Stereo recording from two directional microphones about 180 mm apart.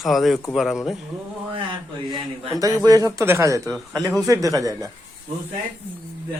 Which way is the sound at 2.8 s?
20° right (ahead or behind).